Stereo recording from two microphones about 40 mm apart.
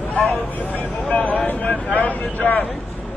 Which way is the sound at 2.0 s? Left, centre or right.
Left.